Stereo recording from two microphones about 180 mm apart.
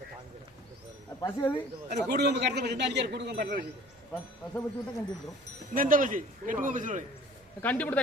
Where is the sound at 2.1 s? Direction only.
65° right (ahead or behind).